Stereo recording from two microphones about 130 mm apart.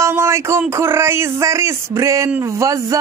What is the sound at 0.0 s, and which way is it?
Speech, 20° right (ahead or behind).